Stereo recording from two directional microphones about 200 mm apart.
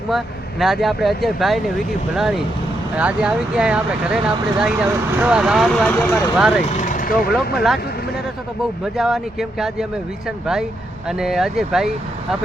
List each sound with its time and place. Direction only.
0.6 s speech: centre (ahead or behind)
6.7 s vehicle: 35° left (ahead or behind)
7.3 s speech: centre (ahead or behind)
8.8 s speech: centre (ahead or behind)